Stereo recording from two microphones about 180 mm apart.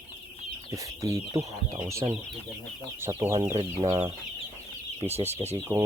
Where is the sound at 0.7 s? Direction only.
20° right (ahead or behind).